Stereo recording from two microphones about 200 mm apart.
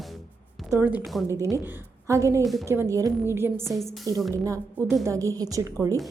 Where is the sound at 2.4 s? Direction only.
Centre (ahead or behind).